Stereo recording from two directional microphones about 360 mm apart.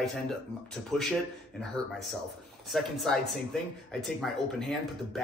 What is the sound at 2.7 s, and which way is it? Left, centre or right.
Speech, centre.